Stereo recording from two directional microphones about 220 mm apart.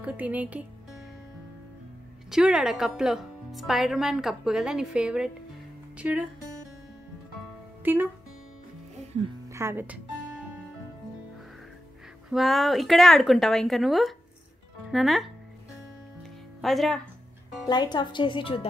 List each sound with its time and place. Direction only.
0.0 s speech: 5° right (ahead or behind)
2.3 s a woman's voice: 5° right (ahead or behind)
7.8 s speech: 10° right (ahead or behind)
9.5 s speech: 10° right (ahead or behind)
12.3 s a woman's voice: centre (ahead or behind)
16.2 s music: centre (ahead or behind)
17.6 s speech: 20° left (ahead or behind)